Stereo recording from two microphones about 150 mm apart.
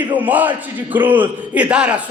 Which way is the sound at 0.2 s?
10° right (ahead or behind).